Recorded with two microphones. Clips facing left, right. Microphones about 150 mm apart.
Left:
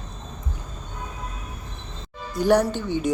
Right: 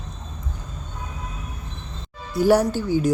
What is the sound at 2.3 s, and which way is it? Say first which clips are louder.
Speech: right 2 dB; 5° right (ahead or behind).